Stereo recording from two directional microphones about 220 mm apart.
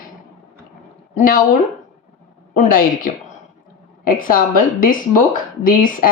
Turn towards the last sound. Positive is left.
turn(degrees=40)  # may be behind; listen again after turning